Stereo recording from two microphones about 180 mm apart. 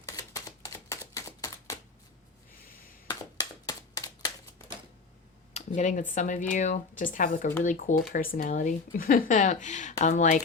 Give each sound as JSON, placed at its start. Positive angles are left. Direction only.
{"t": 0.2, "sound": "typewriter", "side_deg": 20}
{"t": 3.1, "sound": "a sound", "side_deg": 20}
{"t": 5.5, "sound": "speech", "side_deg": 40}